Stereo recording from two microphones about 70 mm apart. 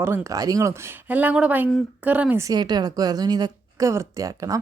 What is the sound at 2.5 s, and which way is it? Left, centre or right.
Speech, right.